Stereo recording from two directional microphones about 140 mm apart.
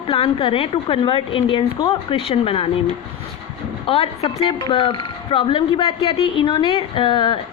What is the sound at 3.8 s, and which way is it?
A woman's voice, 45° left (ahead or behind).